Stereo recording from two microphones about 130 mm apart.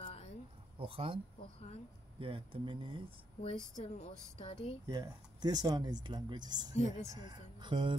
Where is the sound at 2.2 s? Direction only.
45° right (ahead or behind).